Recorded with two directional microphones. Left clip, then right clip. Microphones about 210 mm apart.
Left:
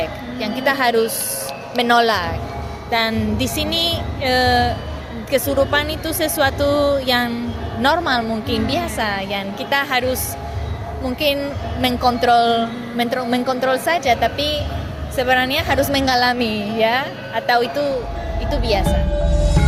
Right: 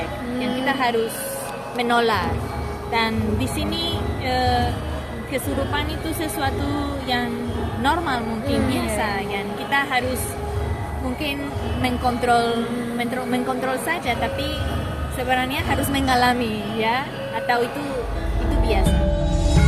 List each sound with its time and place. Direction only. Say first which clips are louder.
0.4 s music: left 5 dB; 55° left (ahead or behind)
1.7 s a woman's voice: left 5 dB; 55° left (ahead or behind)
11.8 s a woman's voice: left 6 dB; 50° left (ahead or behind)
19.1 s music: left 3 dB; centre (ahead or behind)